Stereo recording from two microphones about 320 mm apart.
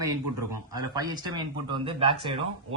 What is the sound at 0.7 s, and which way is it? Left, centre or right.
Speech, centre.